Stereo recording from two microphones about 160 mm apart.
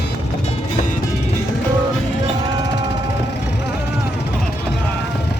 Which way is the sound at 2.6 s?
90° left.